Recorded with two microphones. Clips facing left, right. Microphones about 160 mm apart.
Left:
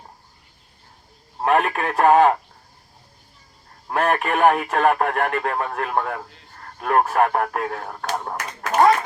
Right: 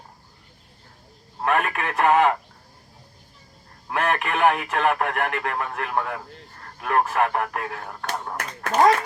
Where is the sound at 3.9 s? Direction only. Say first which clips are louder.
Left 3 dB; 35° left (ahead or behind).